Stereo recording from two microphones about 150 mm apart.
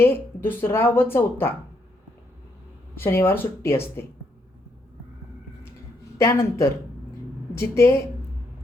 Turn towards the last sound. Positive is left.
turn(degrees=20)  # may be behind; listen again after turning